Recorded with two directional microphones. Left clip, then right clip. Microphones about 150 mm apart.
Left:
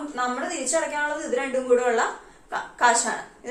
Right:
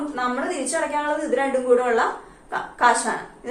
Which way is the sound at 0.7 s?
25° left (ahead or behind).